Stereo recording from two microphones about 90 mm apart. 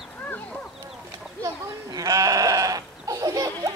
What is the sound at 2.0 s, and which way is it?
Goat, 40° right (ahead or behind).